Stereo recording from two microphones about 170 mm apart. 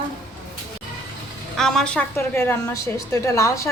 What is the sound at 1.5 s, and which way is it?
A woman's voice, 5° left (ahead or behind).